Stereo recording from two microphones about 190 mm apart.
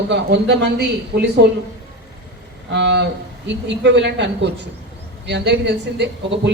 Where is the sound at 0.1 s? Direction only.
65° right (ahead or behind).